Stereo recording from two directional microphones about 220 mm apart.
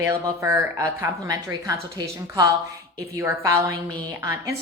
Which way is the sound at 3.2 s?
10° right (ahead or behind).